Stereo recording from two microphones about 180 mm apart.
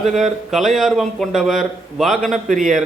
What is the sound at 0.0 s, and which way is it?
Speech, centre (ahead or behind).